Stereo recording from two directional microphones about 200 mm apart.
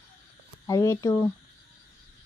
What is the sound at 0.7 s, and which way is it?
Speech, 15° left (ahead or behind).